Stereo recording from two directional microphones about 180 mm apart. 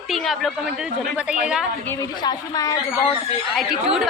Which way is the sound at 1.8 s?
15° left (ahead or behind).